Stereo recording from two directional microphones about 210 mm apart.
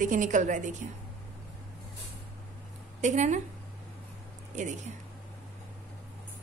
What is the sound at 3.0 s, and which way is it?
Speech, 35° right (ahead or behind).